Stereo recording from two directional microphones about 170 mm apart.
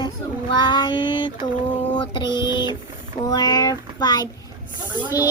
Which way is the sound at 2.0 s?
25° left (ahead or behind).